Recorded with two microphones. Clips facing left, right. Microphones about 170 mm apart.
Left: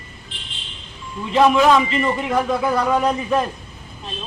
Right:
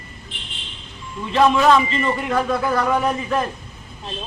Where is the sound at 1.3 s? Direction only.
15° left (ahead or behind).